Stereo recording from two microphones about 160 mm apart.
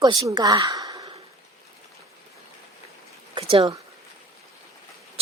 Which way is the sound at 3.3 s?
30° right (ahead or behind).